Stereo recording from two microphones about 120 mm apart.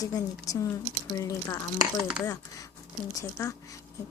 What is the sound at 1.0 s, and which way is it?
Speech, 25° left (ahead or behind).